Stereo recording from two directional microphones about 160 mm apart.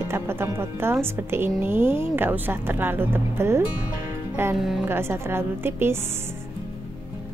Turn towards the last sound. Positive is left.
turn(degrees=-15)  # may be behind; listen again after turning